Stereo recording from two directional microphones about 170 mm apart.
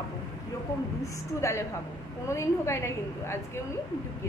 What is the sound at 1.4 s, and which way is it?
Speech, 15° left (ahead or behind).